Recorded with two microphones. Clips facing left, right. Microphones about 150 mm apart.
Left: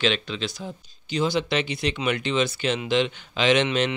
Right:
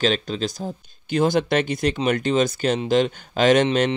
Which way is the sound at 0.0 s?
40° right (ahead or behind).